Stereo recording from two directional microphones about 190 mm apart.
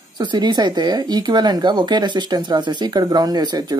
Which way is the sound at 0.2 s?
25° right (ahead or behind).